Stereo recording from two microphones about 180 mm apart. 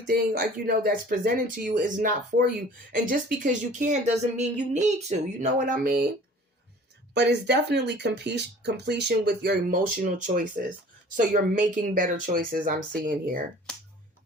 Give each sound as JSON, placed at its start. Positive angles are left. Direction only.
{"t": 0.1, "sound": "speech", "side_deg": -55}
{"t": 7.1, "sound": "speech", "side_deg": -70}
{"t": 13.7, "sound": "finger snapping", "side_deg": 5}